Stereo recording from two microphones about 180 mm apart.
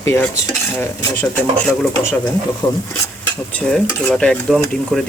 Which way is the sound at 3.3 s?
10° left (ahead or behind).